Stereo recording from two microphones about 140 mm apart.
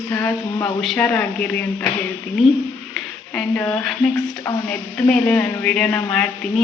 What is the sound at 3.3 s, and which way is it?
A woman's voice, 10° left (ahead or behind).